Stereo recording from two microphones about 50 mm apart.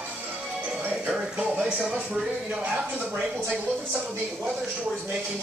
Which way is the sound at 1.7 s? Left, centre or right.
Right.